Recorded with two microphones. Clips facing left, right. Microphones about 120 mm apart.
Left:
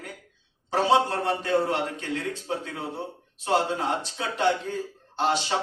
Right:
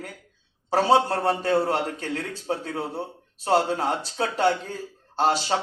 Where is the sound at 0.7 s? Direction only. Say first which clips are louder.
Right 2 dB; 35° right (ahead or behind).